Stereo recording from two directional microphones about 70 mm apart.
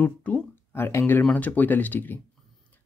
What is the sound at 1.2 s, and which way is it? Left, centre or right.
Speech, left.